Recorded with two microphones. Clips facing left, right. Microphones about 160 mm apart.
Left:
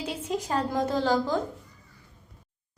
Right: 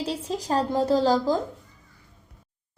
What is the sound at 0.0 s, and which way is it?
A woman's voice, 35° right (ahead or behind).